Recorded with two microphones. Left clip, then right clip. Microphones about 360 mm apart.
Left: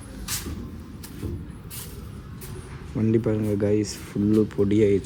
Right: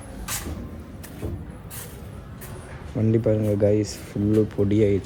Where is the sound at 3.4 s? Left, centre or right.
Right.